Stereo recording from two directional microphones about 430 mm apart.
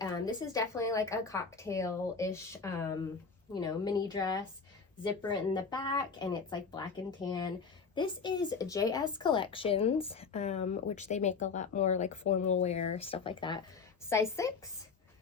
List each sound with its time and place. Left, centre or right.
0.0 s a woman's voice: centre